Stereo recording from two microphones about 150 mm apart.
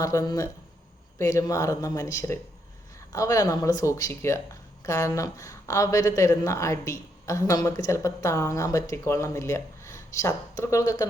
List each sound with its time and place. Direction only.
0.0 s a woman's voice: 20° left (ahead or behind)